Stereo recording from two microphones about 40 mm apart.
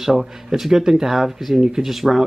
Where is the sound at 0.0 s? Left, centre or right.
Centre.